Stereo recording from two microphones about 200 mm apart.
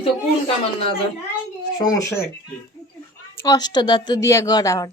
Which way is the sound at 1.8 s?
15° left (ahead or behind).